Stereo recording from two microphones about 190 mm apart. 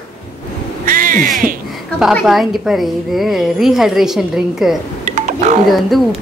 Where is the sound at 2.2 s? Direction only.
Centre (ahead or behind).